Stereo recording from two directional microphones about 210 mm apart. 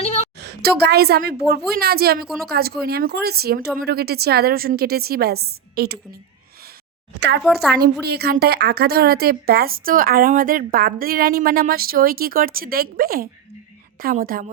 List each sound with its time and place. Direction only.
0.0 s a sound: 30° left (ahead or behind)
0.4 s a woman's voice: 50° right (ahead or behind)
2.2 s a woman's voice: centre (ahead or behind)
2.5 s a woman's voice: 45° right (ahead or behind)
7.2 s speech: 55° right (ahead or behind)
7.4 s a woman's voice: centre (ahead or behind)
8.0 s a woman's voice: 50° right (ahead or behind)